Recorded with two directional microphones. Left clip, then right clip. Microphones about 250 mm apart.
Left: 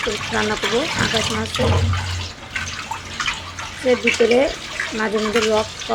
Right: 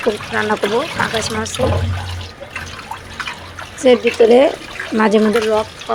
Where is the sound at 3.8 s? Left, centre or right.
Right.